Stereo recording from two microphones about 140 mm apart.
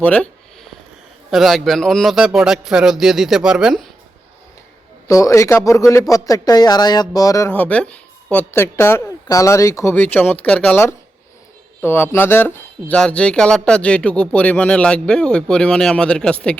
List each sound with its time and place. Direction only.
0.0 s a sound: 10° left (ahead or behind)
1.3 s a man's voice: centre (ahead or behind)
5.0 s speech: 25° left (ahead or behind)